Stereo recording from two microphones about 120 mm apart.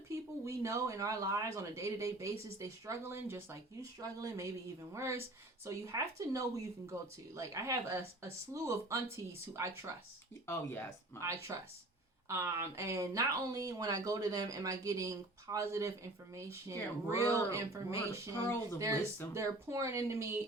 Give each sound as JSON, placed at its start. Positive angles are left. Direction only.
{"t": 0.1, "sound": "speech", "side_deg": -25}
{"t": 10.4, "sound": "speech", "side_deg": 20}
{"t": 11.5, "sound": "speech", "side_deg": -25}